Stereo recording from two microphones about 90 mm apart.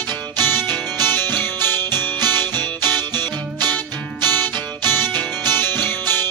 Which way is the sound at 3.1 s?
50° right (ahead or behind).